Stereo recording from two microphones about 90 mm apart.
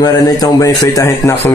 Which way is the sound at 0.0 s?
45° left (ahead or behind).